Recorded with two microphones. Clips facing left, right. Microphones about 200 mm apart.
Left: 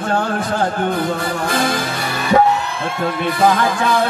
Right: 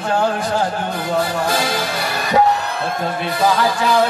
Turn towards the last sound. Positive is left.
turn(degrees=55)  # may be behind; listen again after turning